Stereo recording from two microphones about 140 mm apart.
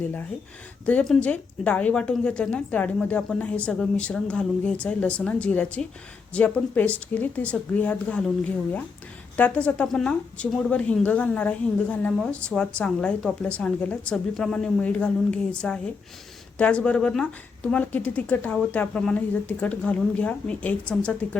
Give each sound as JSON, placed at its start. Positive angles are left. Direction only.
{"t": 0.9, "sound": "a woman's voice", "side_deg": 5}